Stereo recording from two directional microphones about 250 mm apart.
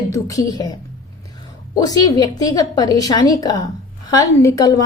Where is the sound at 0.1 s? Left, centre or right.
Centre.